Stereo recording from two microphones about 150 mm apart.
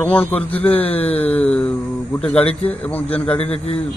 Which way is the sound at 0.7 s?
40° left (ahead or behind).